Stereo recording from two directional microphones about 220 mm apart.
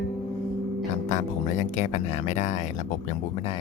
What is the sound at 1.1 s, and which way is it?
Speech, 30° left (ahead or behind).